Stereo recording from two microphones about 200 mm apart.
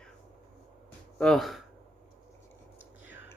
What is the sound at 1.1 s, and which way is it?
Speech, 5° left (ahead or behind).